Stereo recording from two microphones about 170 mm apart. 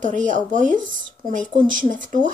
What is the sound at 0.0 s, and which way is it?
Speech, 45° right (ahead or behind).